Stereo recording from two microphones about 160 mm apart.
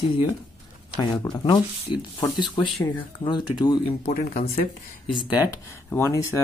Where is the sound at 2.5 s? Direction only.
30° left (ahead or behind).